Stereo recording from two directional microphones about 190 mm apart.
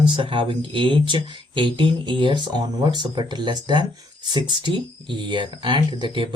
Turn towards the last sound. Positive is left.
turn(degrees=-25)  # may be behind; listen again after turning